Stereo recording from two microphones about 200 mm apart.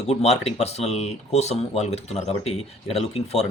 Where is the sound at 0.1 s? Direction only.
30° left (ahead or behind).